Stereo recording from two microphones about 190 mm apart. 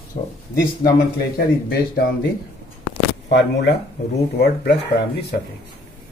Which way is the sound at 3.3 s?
65° left (ahead or behind).